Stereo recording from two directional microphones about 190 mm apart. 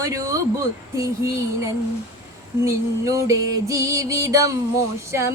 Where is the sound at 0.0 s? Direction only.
15° right (ahead or behind).